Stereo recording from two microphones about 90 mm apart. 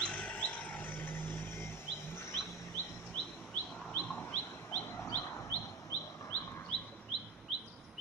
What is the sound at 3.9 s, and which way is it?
Bird, 15° left (ahead or behind).